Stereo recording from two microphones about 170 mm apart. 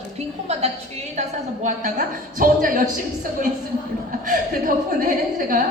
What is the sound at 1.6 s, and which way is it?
A woman's voice, 50° right (ahead or behind).